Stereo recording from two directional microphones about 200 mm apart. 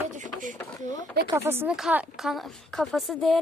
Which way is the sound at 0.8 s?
20° left (ahead or behind).